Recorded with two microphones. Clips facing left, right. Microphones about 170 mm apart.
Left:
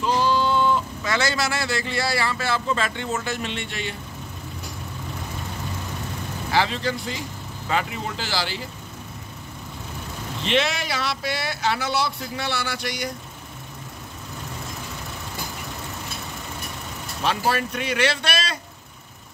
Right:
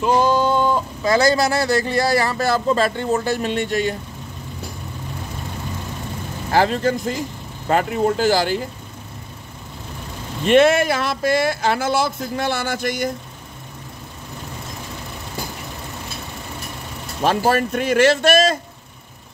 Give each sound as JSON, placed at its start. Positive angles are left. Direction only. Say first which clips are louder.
{"t": 0.0, "sound": "speech", "louder": "right 5 dB", "side_deg": -50}
{"t": 6.5, "sound": "speech", "louder": "right 6 dB", "side_deg": -45}
{"t": 10.4, "sound": "speech", "louder": "right 10 dB", "side_deg": -50}
{"t": 17.2, "sound": "speech", "louder": "right 6 dB", "side_deg": -45}